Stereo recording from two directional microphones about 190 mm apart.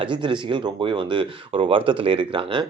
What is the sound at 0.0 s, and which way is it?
Speech, 25° right (ahead or behind).